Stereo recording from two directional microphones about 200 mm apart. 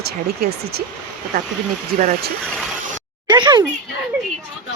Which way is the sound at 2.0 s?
40° right (ahead or behind).